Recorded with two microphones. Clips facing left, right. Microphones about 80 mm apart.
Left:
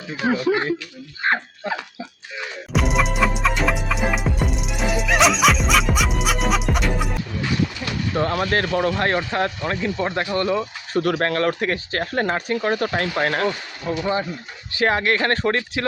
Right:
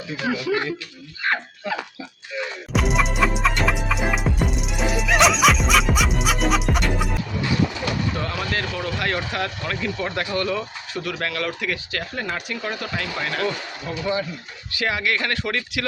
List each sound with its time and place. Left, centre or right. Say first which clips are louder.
0.3 s speech: left 4 dB; left
2.7 s music: left 1 dB; centre
8.1 s speech: left 6 dB; left
10.9 s speech: left 7 dB; left